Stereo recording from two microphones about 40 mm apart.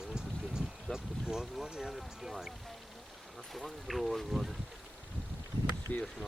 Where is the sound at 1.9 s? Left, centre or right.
Centre.